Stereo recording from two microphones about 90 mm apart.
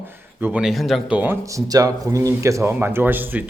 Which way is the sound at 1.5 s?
40° right (ahead or behind).